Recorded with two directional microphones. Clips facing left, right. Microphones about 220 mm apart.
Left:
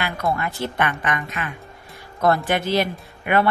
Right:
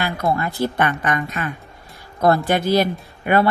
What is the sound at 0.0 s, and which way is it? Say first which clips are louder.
Speech: right 3 dB; 35° right (ahead or behind).